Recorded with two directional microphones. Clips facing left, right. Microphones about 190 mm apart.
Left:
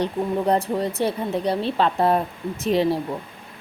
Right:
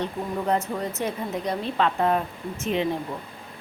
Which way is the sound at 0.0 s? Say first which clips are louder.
Left 5 dB; 35° left (ahead or behind).